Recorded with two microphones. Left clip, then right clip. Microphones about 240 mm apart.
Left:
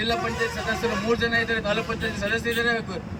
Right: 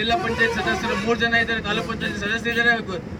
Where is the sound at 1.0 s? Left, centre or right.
Centre.